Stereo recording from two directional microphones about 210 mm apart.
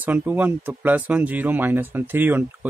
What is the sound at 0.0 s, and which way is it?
Speech, 10° right (ahead or behind).